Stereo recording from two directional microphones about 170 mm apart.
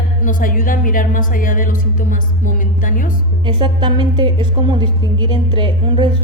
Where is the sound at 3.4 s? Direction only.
25° right (ahead or behind).